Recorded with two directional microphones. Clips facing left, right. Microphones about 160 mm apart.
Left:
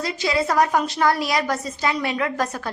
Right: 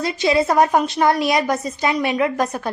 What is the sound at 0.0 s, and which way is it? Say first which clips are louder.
A woman's voice: right 5 dB; 25° right (ahead or behind).